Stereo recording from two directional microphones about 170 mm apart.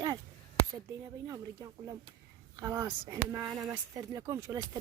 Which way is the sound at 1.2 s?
20° right (ahead or behind).